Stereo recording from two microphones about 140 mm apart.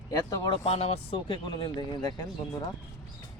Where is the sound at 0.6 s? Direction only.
50° left (ahead or behind); by 2.1 s 35° left (ahead or behind).